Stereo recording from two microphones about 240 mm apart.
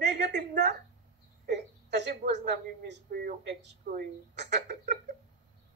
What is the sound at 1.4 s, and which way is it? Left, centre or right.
A woman's voice, right.